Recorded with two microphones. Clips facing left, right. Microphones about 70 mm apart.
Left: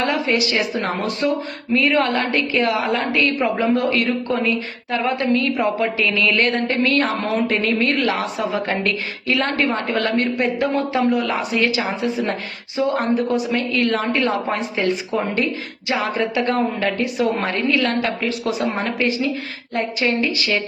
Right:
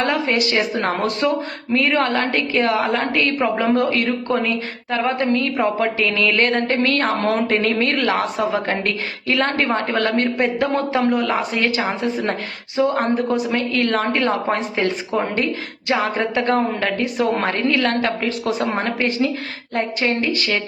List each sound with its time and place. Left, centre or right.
0.0 s speech: right
1.7 s a woman's voice: right